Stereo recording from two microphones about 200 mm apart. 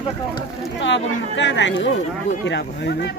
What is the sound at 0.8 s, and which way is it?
Speech, 65° left (ahead or behind).